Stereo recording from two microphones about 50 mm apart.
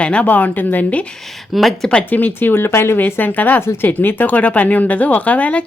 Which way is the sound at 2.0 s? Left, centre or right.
Left.